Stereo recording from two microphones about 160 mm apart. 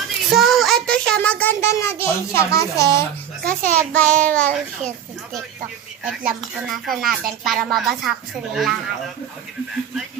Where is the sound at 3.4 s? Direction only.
55° right (ahead or behind).